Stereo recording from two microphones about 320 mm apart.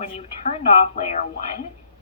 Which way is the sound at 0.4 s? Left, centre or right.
Centre.